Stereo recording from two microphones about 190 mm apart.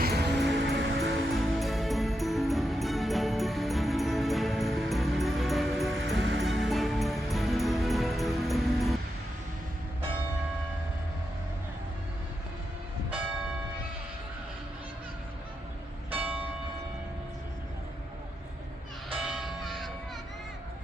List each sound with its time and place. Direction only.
0.0 s music: 60° right (ahead or behind)
1.4 s music: centre (ahead or behind)
6.1 s music: 75° right (ahead or behind)
6.4 s music: centre (ahead or behind)
16.0 s church bell: 10° right (ahead or behind)
19.2 s music: centre (ahead or behind)